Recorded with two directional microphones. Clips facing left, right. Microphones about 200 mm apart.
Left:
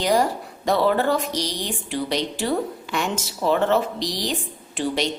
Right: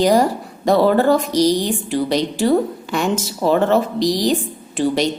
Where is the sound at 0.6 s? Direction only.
40° right (ahead or behind).